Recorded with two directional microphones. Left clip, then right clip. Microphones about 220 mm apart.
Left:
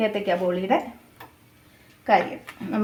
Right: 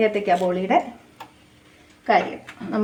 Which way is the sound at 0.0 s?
15° left (ahead or behind).